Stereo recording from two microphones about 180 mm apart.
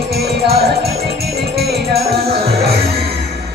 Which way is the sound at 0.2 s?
60° right (ahead or behind).